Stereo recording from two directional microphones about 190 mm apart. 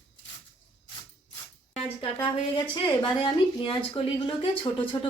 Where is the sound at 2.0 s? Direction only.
25° left (ahead or behind).